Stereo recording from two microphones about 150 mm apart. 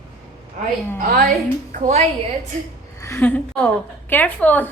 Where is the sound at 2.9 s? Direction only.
20° left (ahead or behind).